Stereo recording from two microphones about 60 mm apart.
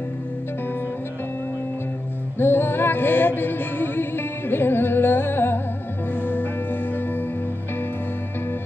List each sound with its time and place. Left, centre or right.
2.3 s music: left